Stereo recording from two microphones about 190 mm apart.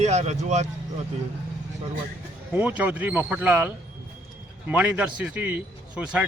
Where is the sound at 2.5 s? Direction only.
10° right (ahead or behind).